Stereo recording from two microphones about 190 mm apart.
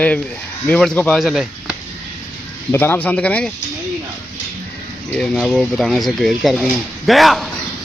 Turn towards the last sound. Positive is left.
turn(degrees=0)  # may be behind; listen again after turning